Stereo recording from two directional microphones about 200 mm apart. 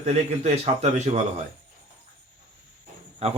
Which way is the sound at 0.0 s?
35° right (ahead or behind).